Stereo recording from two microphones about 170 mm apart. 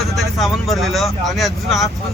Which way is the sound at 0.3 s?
Centre (ahead or behind).